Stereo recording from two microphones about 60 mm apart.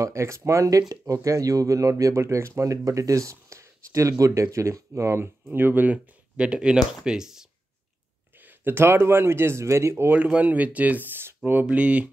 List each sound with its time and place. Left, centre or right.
0.0 s speech: right
5.2 s speech: right
6.3 s speech: centre
8.4 s speech: right
10.0 s speech: right
11.6 s speech: right